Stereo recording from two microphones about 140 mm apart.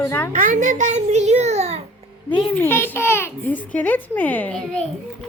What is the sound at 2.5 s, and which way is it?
A woman's voice, 15° left (ahead or behind).